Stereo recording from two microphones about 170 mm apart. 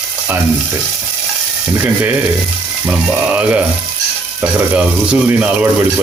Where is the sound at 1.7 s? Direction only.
10° right (ahead or behind).